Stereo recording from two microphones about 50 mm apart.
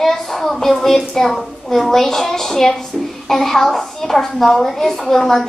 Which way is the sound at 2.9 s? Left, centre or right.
Centre.